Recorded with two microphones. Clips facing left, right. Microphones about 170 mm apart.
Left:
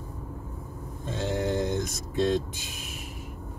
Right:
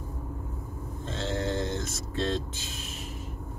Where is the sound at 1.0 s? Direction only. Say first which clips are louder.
Left 3 dB; 15° left (ahead or behind).